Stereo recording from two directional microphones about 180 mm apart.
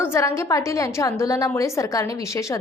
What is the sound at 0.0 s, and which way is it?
A woman's voice, 15° left (ahead or behind).